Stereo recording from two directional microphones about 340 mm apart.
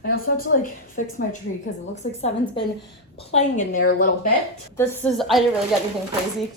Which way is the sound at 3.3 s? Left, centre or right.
Left.